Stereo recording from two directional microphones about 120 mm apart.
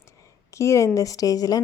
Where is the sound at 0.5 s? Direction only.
25° left (ahead or behind).